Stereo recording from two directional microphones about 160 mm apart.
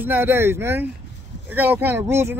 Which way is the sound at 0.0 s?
15° right (ahead or behind).